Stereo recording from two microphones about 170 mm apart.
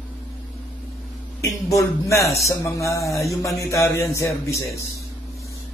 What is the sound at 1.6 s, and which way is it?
Speech, 20° left (ahead or behind).